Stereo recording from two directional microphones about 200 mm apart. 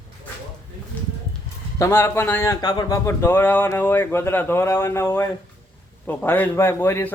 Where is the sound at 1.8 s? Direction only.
10° left (ahead or behind).